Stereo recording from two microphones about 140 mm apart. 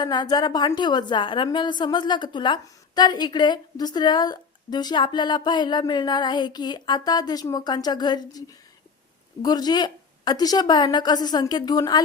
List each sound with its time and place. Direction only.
0.0 s a woman's voice: 30° left (ahead or behind)